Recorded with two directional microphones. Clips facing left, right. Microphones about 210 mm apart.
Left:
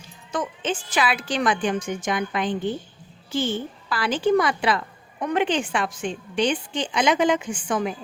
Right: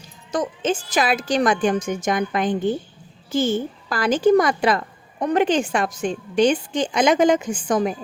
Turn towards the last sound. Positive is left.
turn(degrees=-40)  # may be behind; listen again after turning